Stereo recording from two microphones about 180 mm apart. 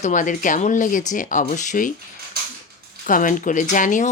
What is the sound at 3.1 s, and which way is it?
Speech, 45° left (ahead or behind).